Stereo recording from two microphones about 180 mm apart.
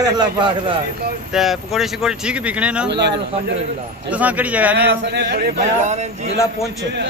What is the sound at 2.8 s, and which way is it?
Speech, 70° right (ahead or behind).